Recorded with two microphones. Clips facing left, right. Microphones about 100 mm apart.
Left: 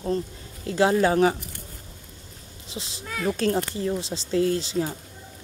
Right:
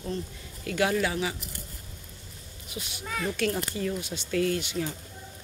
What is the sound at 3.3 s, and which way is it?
Speech, 35° left (ahead or behind).